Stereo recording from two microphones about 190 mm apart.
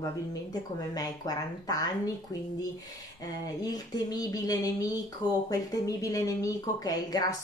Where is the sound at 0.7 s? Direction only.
20° left (ahead or behind).